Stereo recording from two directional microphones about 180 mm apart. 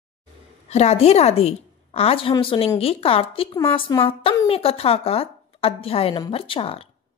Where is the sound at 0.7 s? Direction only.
35° left (ahead or behind).